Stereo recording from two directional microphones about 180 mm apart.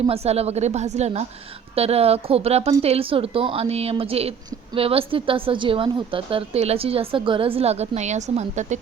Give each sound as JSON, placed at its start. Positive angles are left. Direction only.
{"t": 0.0, "sound": "a woman's voice", "side_deg": -35}